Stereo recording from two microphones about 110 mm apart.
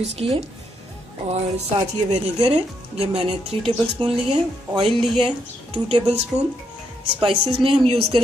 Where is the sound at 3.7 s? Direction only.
50° right (ahead or behind).